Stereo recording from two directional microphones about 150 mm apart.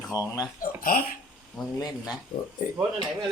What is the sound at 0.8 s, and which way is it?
Speech, 75° left (ahead or behind).